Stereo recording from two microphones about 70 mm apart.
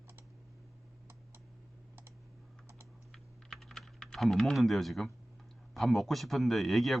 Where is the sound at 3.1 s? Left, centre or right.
Centre.